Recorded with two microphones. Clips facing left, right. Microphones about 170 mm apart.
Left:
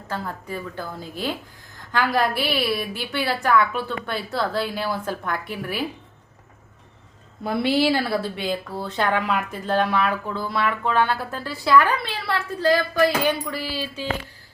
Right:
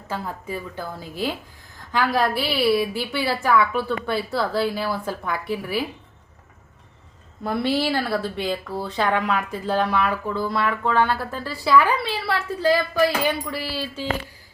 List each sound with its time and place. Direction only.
0.1 s a woman's voice: 5° right (ahead or behind)
7.4 s speech: 5° left (ahead or behind)